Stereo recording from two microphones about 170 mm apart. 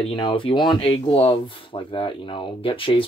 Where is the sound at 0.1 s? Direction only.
30° left (ahead or behind).